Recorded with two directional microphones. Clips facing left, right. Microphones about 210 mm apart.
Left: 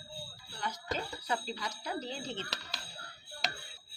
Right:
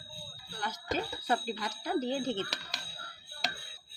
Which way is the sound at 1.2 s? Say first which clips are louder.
Right 4 dB; 50° right (ahead or behind).